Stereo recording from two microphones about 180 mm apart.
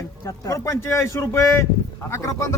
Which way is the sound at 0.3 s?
15° left (ahead or behind).